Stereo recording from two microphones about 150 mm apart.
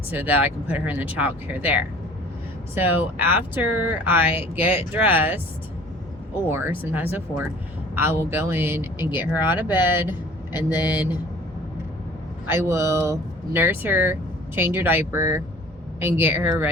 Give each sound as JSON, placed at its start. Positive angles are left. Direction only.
{"t": 0.1, "sound": "speech", "side_deg": -10}
{"t": 6.5, "sound": "speech", "side_deg": -15}
{"t": 12.5, "sound": "speech", "side_deg": -20}